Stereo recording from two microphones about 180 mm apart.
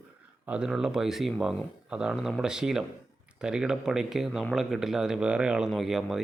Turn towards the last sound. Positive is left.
turn(degrees=0)  # may be behind; listen again after turning